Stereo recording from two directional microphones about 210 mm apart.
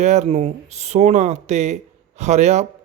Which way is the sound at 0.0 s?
35° right (ahead or behind).